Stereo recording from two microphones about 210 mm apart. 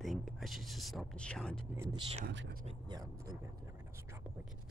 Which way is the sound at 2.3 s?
55° right (ahead or behind).